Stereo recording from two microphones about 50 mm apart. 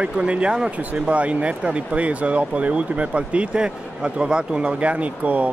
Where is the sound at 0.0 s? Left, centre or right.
Right.